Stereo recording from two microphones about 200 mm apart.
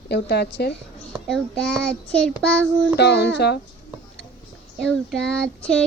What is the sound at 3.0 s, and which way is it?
Speech, 55° left (ahead or behind).